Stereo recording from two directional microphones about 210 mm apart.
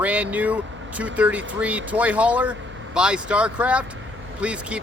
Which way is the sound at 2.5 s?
60° right (ahead or behind).